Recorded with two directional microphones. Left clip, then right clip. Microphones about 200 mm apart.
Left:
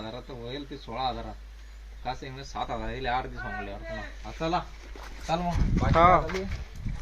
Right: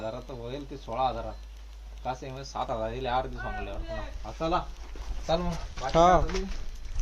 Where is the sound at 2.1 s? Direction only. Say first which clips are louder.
Right 1 dB; 5° right (ahead or behind).